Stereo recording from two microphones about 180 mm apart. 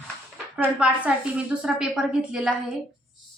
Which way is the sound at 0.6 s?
5° right (ahead or behind).